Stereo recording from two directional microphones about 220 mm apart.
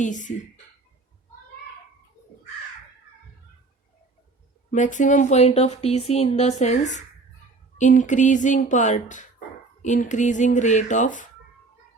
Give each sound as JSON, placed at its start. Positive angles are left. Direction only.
{"t": 0.0, "sound": "speech", "side_deg": 35}
{"t": 4.7, "sound": "speech", "side_deg": 35}